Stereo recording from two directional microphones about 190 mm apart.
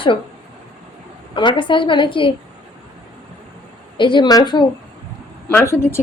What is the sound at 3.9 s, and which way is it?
Speech, 25° left (ahead or behind).